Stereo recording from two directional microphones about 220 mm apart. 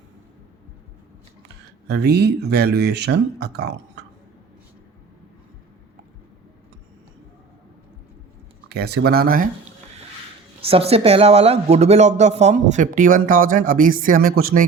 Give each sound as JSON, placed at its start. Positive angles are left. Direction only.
{"t": 1.9, "sound": "speech", "side_deg": -50}
{"t": 8.7, "sound": "speech", "side_deg": -50}
{"t": 10.6, "sound": "speech", "side_deg": -25}